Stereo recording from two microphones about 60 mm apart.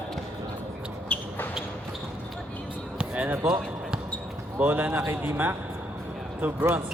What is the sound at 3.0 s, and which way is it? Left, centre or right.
Basketball bounce, right.